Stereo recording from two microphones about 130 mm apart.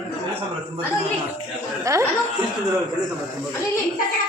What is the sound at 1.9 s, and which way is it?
Speech, 25° right (ahead or behind).